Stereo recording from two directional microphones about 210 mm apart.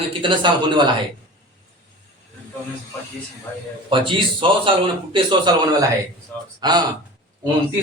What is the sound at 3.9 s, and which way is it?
Speech, 25° right (ahead or behind).